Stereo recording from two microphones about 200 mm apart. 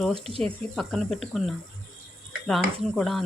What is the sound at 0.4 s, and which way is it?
Speech, centre (ahead or behind).